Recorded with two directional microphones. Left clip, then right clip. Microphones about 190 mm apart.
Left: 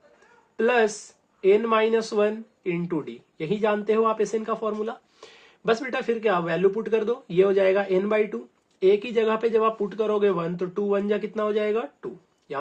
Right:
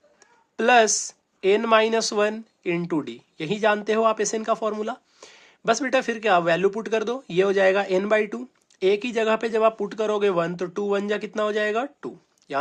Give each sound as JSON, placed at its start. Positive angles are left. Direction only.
{"t": 0.5, "sound": "speech", "side_deg": -50}
{"t": 5.2, "sound": "speech", "side_deg": -35}